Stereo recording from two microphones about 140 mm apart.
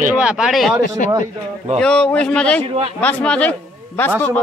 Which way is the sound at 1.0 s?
70° left (ahead or behind).